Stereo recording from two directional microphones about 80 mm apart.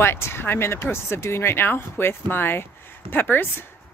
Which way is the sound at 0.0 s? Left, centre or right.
Left.